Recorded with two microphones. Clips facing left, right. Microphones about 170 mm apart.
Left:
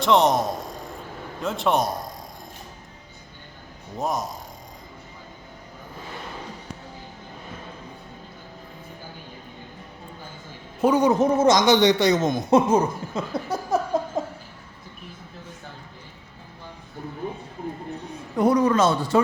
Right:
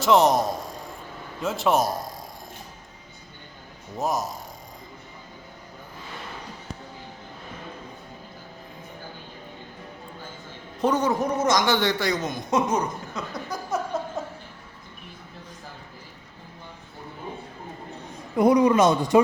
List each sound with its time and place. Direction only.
0.0 s a man's voice: centre (ahead or behind)
3.9 s speech: centre (ahead or behind)
10.8 s a man's voice: 10° left (ahead or behind)
11.1 s a man's voice: 25° left (ahead or behind)
18.3 s speech: 10° right (ahead or behind)